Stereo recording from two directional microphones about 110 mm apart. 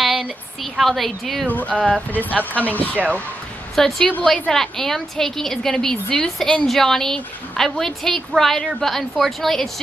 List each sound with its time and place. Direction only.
0.0 s a sound: 5° right (ahead or behind)
0.7 s a woman's voice: centre (ahead or behind)
1.5 s speech: 15° left (ahead or behind)
2.0 s speech: 15° right (ahead or behind)
3.7 s a woman's voice: 5° left (ahead or behind)